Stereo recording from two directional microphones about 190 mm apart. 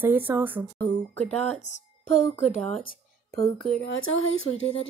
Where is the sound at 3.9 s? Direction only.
90° left.